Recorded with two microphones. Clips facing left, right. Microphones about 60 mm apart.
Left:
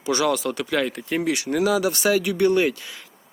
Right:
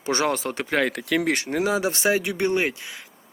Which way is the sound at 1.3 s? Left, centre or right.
Right.